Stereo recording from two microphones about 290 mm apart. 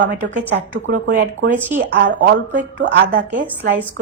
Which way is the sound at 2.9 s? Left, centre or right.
Right.